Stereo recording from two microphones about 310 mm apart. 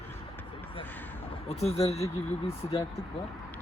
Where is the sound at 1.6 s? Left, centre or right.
Centre.